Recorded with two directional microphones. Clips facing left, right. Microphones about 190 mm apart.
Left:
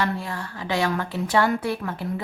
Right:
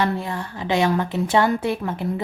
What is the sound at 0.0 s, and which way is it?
A woman's voice, 20° right (ahead or behind).